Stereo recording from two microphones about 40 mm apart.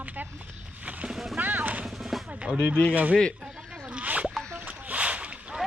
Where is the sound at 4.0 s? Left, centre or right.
Right.